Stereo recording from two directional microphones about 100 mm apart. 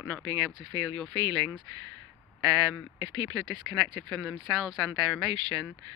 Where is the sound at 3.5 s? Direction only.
45° right (ahead or behind).